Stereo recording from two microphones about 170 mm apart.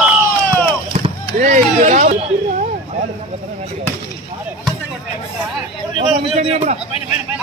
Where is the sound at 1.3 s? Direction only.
50° right (ahead or behind).